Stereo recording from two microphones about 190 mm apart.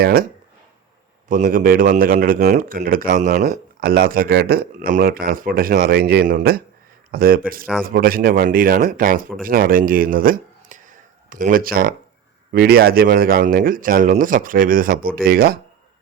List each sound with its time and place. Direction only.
0.0 s speech: 50° right (ahead or behind)
1.3 s speech: 45° right (ahead or behind)